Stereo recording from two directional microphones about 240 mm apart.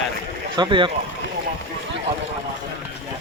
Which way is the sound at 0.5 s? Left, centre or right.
Centre.